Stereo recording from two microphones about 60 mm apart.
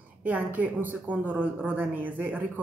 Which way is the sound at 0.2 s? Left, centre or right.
Right.